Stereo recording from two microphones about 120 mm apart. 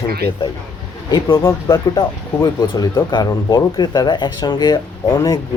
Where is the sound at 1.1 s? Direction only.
30° left (ahead or behind).